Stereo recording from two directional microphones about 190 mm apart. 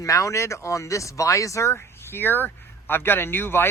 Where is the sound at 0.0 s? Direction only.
15° left (ahead or behind).